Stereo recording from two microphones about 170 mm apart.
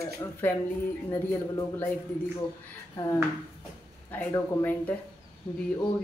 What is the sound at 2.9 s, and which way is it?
A man's voice, 20° left (ahead or behind).